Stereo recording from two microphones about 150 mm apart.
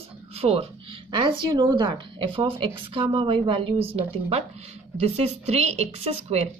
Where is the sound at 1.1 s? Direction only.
30° right (ahead or behind).